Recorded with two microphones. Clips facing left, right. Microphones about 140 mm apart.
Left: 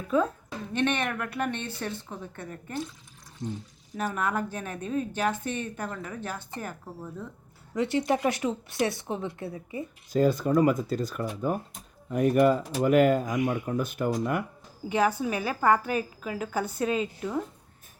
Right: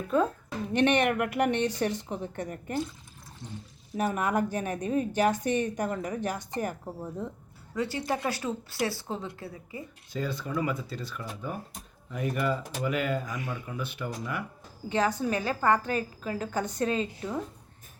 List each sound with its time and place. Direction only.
0.7 s speech: 15° right (ahead or behind)
3.4 s speech: 40° left (ahead or behind)
3.9 s speech: 10° right (ahead or behind)
7.8 s a woman's voice: 20° left (ahead or behind)
10.1 s speech: 45° left (ahead or behind)
13.2 s a woman's voice: 15° left (ahead or behind)
13.7 s speech: 45° left (ahead or behind)
14.8 s a woman's voice: 10° left (ahead or behind)